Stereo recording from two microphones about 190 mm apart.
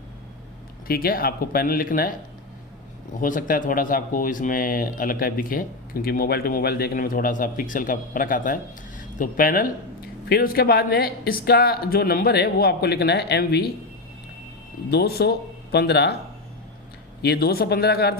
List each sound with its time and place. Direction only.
0.9 s speech: 50° left (ahead or behind)
3.2 s speech: 45° left (ahead or behind)
14.8 s speech: 55° left (ahead or behind)
17.2 s speech: 55° left (ahead or behind)